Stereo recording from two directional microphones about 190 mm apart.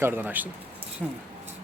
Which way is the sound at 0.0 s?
10° right (ahead or behind).